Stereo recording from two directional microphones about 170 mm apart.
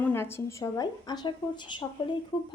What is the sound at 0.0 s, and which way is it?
A woman's voice, 15° left (ahead or behind).